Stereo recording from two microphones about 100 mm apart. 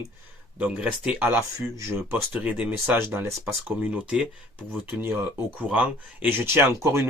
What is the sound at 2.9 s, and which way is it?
Speech, 25° right (ahead or behind).